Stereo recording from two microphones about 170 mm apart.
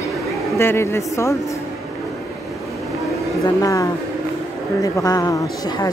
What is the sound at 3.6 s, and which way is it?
Speech, 20° left (ahead or behind).